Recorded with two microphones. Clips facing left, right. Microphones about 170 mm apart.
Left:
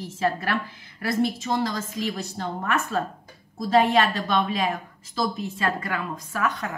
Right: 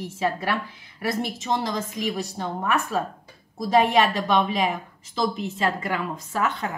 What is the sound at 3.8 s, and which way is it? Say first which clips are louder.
A woman's voice: even; 15° right (ahead or behind).